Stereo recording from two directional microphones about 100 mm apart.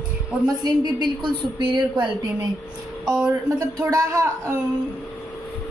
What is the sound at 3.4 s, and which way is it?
Speech, 25° right (ahead or behind).